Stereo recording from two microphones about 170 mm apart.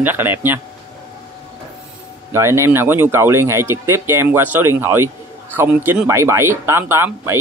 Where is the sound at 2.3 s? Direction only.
15° right (ahead or behind).